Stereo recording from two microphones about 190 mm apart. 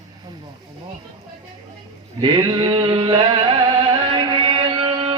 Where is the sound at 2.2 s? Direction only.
25° right (ahead or behind).